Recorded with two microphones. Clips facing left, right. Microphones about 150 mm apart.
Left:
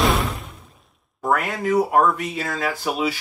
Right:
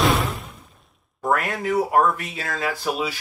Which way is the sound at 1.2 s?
Centre (ahead or behind).